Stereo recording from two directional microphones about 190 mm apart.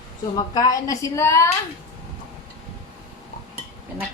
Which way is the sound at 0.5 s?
20° left (ahead or behind).